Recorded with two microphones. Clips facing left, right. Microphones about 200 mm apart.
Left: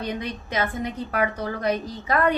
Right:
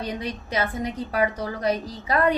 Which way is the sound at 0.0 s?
35° right (ahead or behind).